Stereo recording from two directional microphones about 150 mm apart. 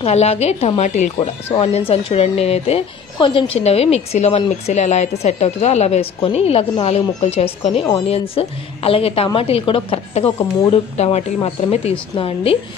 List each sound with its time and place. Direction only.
0.0 s a woman's voice: 45° left (ahead or behind)
1.5 s a woman's voice: 40° left (ahead or behind)